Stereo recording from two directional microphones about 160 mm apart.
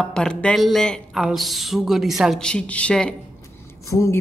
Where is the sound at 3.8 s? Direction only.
20° left (ahead or behind).